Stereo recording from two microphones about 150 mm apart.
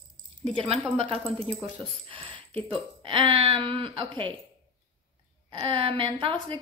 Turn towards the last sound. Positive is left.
turn(degrees=-35)  # may be behind; listen again after turning